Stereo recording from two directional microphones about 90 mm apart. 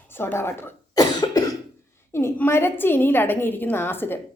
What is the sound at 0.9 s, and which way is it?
Cough, 45° left (ahead or behind).